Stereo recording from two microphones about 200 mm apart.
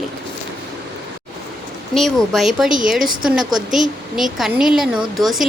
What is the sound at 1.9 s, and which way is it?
A woman's voice, centre (ahead or behind).